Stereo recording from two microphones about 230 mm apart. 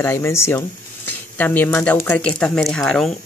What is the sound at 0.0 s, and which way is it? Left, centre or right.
Speech, centre.